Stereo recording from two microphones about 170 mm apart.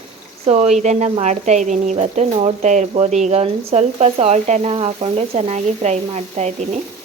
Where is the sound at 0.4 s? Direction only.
40° right (ahead or behind).